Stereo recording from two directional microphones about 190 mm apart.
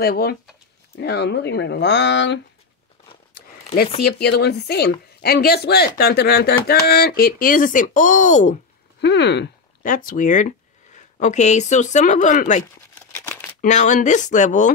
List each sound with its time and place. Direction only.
0.0 s speech: 55° left (ahead or behind)
4.0 s speech: 60° left (ahead or behind); by 8.5 s 40° left (ahead or behind)
9.0 s speech: 65° left (ahead or behind)
9.8 s speech: 45° left (ahead or behind)
13.1 s a sound: 10° left (ahead or behind)
13.6 s speech: 40° left (ahead or behind)